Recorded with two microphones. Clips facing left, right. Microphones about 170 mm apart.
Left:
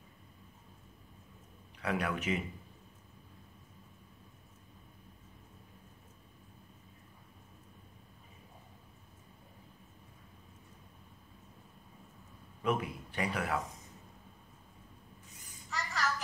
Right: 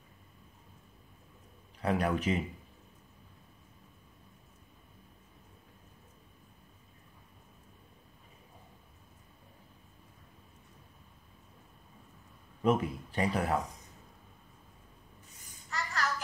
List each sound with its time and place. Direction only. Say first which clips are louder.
1.8 s speech: right 4 dB; 35° right (ahead or behind)
12.6 s a man's voice: right 5 dB; 35° right (ahead or behind)
15.7 s child singing: right 1 dB; centre (ahead or behind)